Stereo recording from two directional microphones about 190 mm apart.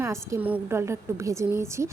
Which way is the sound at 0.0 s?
15° right (ahead or behind).